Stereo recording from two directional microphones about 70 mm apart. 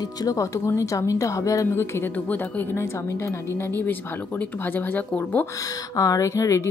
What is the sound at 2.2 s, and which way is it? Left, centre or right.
Speech, left.